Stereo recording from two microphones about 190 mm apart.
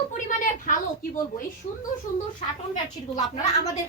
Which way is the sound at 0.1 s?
40° left (ahead or behind).